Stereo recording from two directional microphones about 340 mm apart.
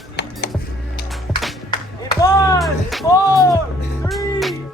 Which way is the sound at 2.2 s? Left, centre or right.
Centre.